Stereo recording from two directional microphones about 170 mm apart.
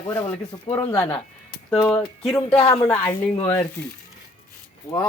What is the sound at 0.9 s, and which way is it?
Speech, 15° left (ahead or behind).